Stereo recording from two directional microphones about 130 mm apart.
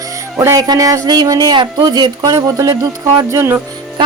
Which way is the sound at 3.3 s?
20° right (ahead or behind).